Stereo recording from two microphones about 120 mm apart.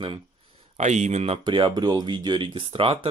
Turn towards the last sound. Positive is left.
turn(degrees=-50)  # may be behind; listen again after turning